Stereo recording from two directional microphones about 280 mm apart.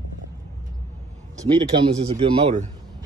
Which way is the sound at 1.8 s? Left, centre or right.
Centre.